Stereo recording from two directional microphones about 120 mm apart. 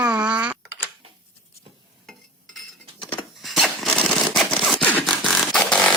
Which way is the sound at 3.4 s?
Centre (ahead or behind).